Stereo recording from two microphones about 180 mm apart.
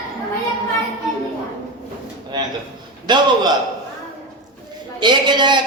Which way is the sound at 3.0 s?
25° right (ahead or behind).